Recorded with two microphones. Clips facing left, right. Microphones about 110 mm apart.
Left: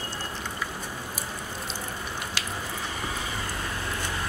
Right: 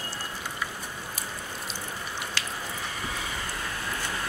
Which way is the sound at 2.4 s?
15° left (ahead or behind).